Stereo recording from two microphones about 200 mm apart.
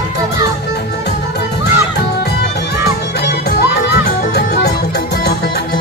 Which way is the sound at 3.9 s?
50° left (ahead or behind).